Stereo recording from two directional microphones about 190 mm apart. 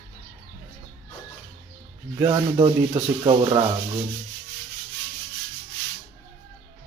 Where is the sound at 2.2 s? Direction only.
25° right (ahead or behind).